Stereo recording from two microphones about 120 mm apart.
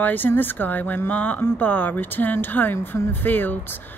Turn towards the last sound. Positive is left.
turn(degrees=15)  # may be behind; listen again after turning